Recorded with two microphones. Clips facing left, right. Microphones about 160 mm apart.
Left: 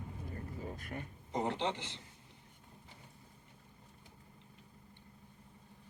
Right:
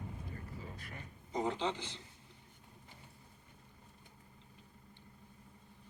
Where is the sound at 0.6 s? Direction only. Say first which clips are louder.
Left 6 dB; 50° left (ahead or behind); by 2.0 s 65° left (ahead or behind).